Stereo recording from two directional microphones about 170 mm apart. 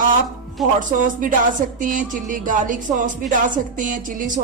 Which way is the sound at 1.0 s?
50° right (ahead or behind).